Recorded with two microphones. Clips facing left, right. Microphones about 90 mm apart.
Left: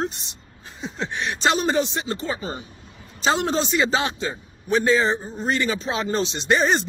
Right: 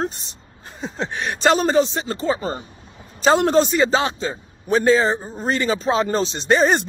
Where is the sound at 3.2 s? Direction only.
45° right (ahead or behind).